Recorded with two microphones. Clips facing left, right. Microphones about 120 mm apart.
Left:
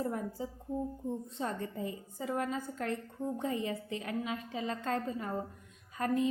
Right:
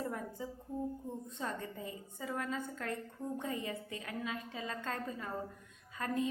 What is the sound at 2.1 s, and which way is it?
A woman's voice, 30° left (ahead or behind).